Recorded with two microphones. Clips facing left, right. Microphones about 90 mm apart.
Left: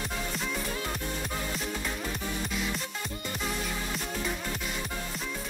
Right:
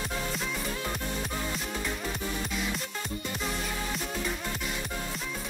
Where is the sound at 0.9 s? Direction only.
Centre (ahead or behind).